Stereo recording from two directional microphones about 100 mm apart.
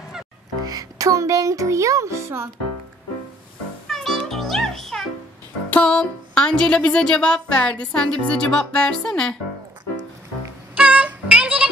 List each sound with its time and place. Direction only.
0.7 s music: 35° right (ahead or behind)
3.8 s music: 5° left (ahead or behind)
5.7 s speech: 10° left (ahead or behind)
10.8 s music: 15° right (ahead or behind)